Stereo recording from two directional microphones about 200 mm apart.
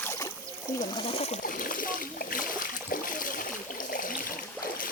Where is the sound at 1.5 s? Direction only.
45° left (ahead or behind).